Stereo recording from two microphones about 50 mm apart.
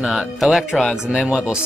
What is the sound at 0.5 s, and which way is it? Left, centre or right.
Speech, centre.